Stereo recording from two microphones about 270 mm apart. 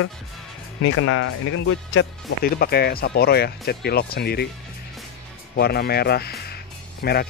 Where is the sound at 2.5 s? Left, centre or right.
Left.